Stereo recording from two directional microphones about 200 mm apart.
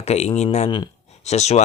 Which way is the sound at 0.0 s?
35° left (ahead or behind).